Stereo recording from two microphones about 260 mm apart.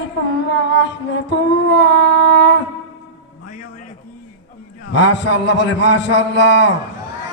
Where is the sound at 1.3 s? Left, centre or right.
Left.